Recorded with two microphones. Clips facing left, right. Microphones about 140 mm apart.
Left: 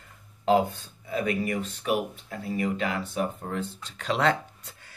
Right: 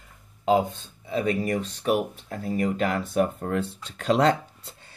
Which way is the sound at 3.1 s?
60° right (ahead or behind).